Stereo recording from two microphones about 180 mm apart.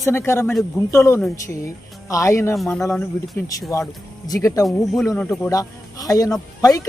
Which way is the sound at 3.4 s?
15° left (ahead or behind).